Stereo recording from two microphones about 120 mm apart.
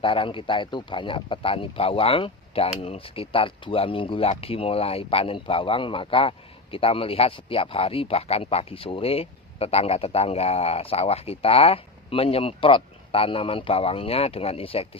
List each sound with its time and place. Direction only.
0.0 s speech: 45° left (ahead or behind)